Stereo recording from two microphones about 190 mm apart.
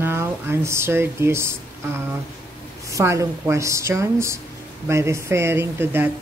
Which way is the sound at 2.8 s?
15° right (ahead or behind).